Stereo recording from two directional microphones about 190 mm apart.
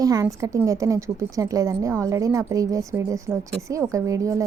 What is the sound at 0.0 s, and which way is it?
A woman's voice, 20° right (ahead or behind).